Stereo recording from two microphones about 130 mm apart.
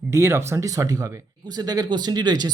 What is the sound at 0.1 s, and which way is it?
Speech, 20° right (ahead or behind).